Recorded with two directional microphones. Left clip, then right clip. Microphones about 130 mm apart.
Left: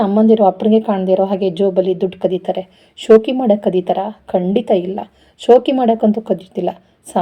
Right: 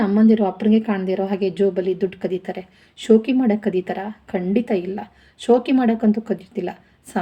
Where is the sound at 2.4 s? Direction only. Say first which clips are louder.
Left 10 dB; 35° left (ahead or behind).